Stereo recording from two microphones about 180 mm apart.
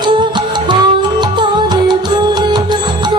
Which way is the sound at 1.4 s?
25° right (ahead or behind).